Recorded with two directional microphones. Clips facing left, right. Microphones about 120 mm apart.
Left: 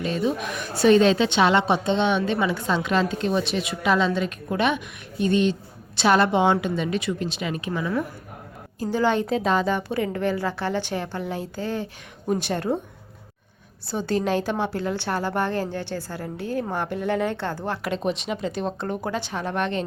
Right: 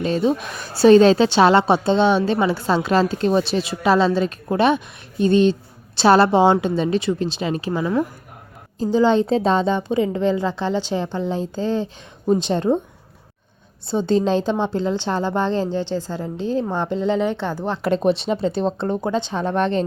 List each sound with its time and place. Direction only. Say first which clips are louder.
0.0 s a woman's voice: right 5 dB; 35° right (ahead or behind)
8.8 s a woman's voice: right 6 dB; 20° right (ahead or behind)
13.8 s a woman's voice: right 6 dB; 25° right (ahead or behind)
17.8 s a woman's voice: right 9 dB; 35° right (ahead or behind)